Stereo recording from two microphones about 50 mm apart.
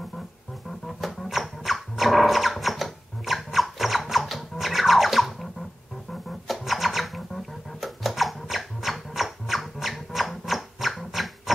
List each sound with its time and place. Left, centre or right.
0.8 s music: centre
6.4 s typing: centre
7.8 s music: centre